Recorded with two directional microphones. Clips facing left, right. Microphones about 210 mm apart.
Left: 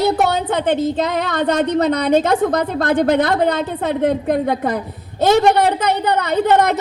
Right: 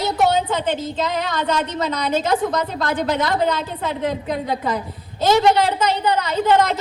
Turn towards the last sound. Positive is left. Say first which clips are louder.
# left 3 dB
turn(degrees=60)  # may be behind; listen again after turning